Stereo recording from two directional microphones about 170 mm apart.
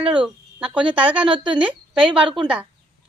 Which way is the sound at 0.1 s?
5° right (ahead or behind).